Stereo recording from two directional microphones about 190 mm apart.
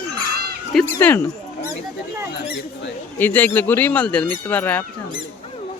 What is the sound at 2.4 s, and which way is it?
Speech, 65° left (ahead or behind).